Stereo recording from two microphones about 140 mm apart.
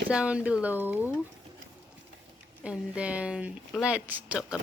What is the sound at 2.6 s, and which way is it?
Speech, 10° right (ahead or behind).